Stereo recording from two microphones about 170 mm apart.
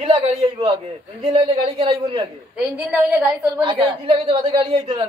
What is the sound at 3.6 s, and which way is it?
A woman's voice, 30° right (ahead or behind).